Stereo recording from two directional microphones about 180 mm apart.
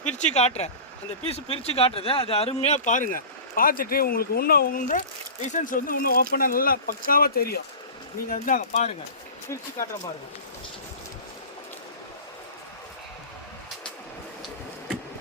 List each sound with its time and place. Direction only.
0.0 s speech: 40° left (ahead or behind)